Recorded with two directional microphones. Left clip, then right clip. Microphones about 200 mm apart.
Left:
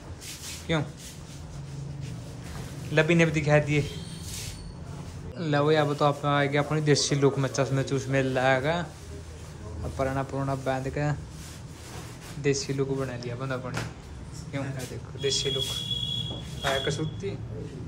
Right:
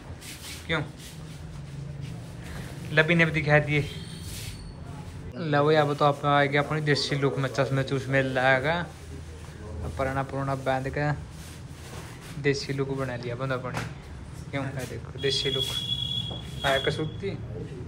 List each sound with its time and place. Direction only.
0.7 s a man's voice: 25° left (ahead or behind)
2.9 s a man's voice: 20° left (ahead or behind)
5.4 s a man's voice: 20° left (ahead or behind)
9.9 s speech: 20° left (ahead or behind)
12.4 s speech: 20° left (ahead or behind)
16.6 s speech: 15° left (ahead or behind)